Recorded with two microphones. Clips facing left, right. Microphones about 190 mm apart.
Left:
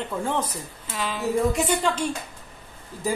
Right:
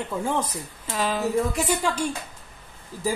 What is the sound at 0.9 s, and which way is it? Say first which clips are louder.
Speech: right 4 dB; 40° right (ahead or behind).